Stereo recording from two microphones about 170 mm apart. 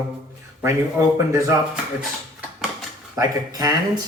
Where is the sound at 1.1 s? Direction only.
15° right (ahead or behind).